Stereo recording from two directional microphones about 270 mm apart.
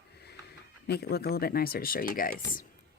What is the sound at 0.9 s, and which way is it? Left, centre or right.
Speech, left.